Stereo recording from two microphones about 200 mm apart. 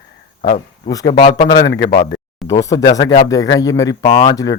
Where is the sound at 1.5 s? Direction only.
60° left (ahead or behind).